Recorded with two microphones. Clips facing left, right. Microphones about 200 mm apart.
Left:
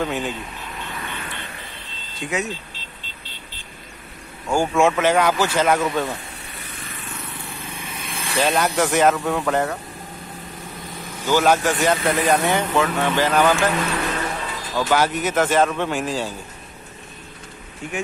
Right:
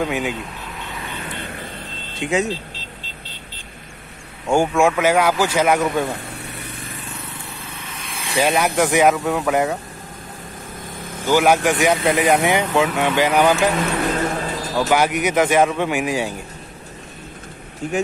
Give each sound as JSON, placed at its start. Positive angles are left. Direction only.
{"t": 0.0, "sound": "speech", "side_deg": -10}
{"t": 2.1, "sound": "speech", "side_deg": -25}
{"t": 4.7, "sound": "speech", "side_deg": -10}
{"t": 7.7, "sound": "vehicle", "side_deg": 10}
{"t": 8.2, "sound": "speech", "side_deg": -10}
{"t": 10.8, "sound": "vehicle", "side_deg": -50}
{"t": 11.2, "sound": "speech", "side_deg": -15}
{"t": 13.9, "sound": "music", "side_deg": -45}
{"t": 14.9, "sound": "speech", "side_deg": -15}